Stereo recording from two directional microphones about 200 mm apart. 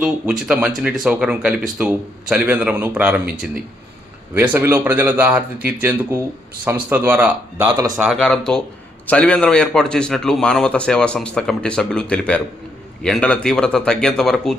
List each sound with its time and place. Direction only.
0.0 s a man's voice: 5° right (ahead or behind)
4.4 s speech: 10° right (ahead or behind)
7.8 s speech: 15° right (ahead or behind)
8.0 s a man's voice: centre (ahead or behind)